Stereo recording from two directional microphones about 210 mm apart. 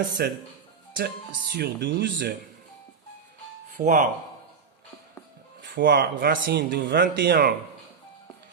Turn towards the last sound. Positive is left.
turn(degrees=-45)  # may be behind; listen again after turning